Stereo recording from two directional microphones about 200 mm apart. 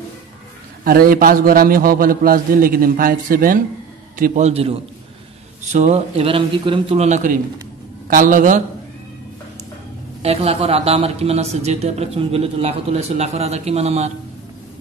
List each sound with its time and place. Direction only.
0.8 s a man's voice: 45° right (ahead or behind)
4.2 s a man's voice: 35° right (ahead or behind)
10.2 s a man's voice: 30° right (ahead or behind)